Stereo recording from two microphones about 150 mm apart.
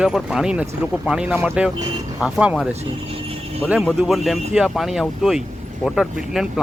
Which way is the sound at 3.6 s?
5° right (ahead or behind).